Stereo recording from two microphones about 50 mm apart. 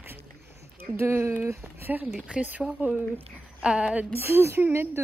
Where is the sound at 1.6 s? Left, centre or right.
Right.